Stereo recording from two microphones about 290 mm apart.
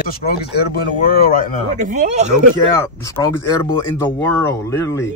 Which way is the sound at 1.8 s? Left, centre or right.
Right.